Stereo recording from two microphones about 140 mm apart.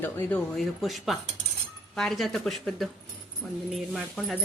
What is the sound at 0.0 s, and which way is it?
Speech, 10° left (ahead or behind).